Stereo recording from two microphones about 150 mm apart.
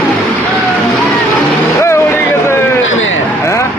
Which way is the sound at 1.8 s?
15° left (ahead or behind).